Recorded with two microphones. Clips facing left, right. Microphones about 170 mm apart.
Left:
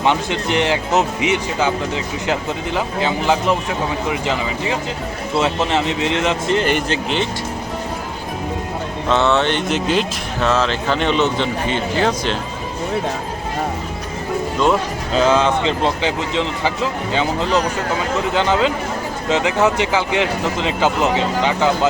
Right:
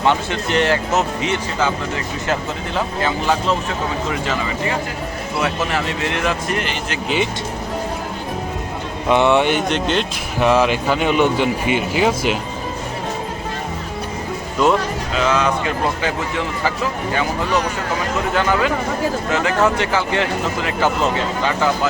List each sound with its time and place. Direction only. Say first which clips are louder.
0.0 s speech: even; 20° left (ahead or behind)
9.0 s speech: right 2 dB; 15° right (ahead or behind)
9.6 s speech: left 1 dB; 5° left (ahead or behind)
10.4 s speech: right 3 dB; 15° right (ahead or behind)
15.1 s speech: left 4 dB; 30° left (ahead or behind)